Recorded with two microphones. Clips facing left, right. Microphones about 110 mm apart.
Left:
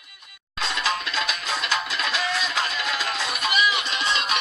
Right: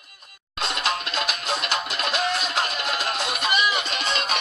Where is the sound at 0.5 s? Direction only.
60° right (ahead or behind).